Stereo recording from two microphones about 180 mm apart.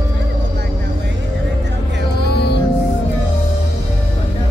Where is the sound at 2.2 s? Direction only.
65° left (ahead or behind).